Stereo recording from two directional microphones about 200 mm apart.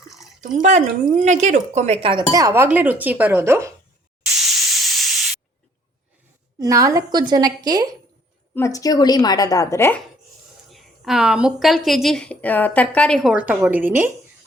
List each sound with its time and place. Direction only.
0.4 s speech: 40° right (ahead or behind); by 3.7 s 10° right (ahead or behind)
4.3 s steam: centre (ahead or behind)
6.6 s a woman's voice: 15° right (ahead or behind)
8.5 s a woman's voice: 15° left (ahead or behind)
10.7 s a woman's voice: centre (ahead or behind)